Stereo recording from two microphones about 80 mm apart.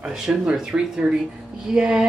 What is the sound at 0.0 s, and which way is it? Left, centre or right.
A man's voice, centre.